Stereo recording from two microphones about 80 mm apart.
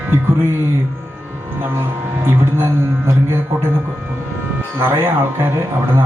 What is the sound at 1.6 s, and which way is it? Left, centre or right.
Speech, right.